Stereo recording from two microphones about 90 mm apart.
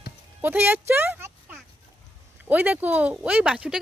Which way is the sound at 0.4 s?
25° right (ahead or behind).